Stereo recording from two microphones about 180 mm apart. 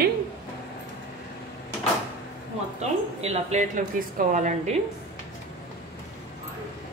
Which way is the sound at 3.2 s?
40° right (ahead or behind).